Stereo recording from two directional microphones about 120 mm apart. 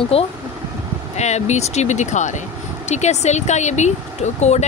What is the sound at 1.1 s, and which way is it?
Speech, 70° left (ahead or behind).